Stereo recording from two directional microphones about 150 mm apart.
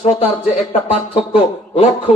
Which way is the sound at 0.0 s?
45° left (ahead or behind).